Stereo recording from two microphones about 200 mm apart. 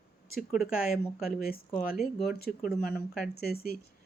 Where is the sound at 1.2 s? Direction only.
45° left (ahead or behind).